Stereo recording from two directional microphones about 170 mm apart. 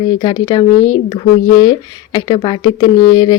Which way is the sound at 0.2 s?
25° left (ahead or behind).